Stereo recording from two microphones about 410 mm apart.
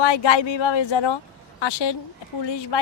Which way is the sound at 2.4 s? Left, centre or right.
Left.